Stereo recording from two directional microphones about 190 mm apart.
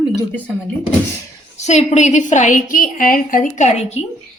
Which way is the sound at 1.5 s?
35° left (ahead or behind).